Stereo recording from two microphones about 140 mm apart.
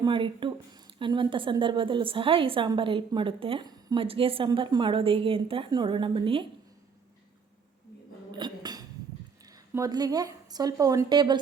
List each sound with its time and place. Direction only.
0.0 s a woman's voice: 35° right (ahead or behind)
4.0 s a woman's voice: 40° right (ahead or behind)
8.3 s a sound: 35° right (ahead or behind)
9.4 s speech: 25° right (ahead or behind)